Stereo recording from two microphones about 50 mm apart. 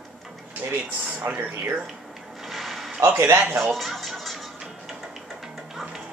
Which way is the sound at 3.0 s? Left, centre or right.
Right.